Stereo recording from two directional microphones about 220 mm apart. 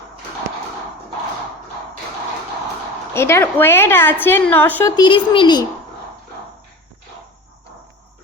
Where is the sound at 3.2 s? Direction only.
10° left (ahead or behind).